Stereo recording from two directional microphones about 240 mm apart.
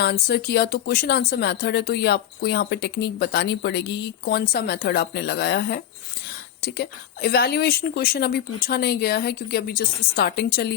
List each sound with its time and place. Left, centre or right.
0.0 s a woman's voice: left